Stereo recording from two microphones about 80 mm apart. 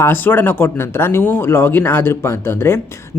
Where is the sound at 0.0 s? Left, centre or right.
Left.